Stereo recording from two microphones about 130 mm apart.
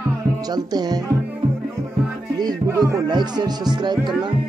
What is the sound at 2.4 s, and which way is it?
Speech, 25° right (ahead or behind).